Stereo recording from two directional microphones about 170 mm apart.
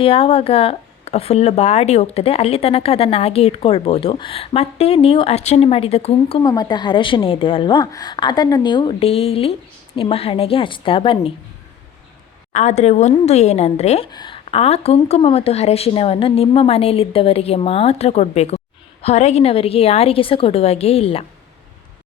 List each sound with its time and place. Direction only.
0.0 s speech: 35° left (ahead or behind)
6.4 s a woman's voice: 20° left (ahead or behind)
12.5 s speech: 40° left (ahead or behind)
14.1 s speech: 25° left (ahead or behind)